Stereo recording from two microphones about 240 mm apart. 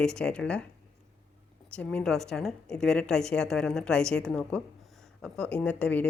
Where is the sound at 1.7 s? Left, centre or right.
Centre.